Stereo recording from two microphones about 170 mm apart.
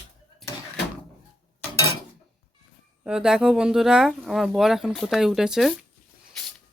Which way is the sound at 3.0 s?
5° right (ahead or behind).